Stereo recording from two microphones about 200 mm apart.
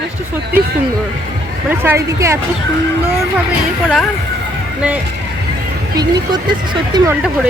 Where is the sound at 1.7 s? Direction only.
10° right (ahead or behind).